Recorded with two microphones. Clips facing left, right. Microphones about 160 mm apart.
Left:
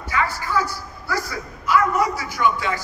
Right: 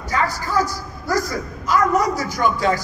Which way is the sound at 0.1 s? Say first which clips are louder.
Right 2 dB; 40° right (ahead or behind).